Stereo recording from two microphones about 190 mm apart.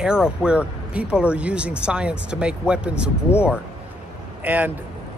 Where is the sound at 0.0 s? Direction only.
5° right (ahead or behind).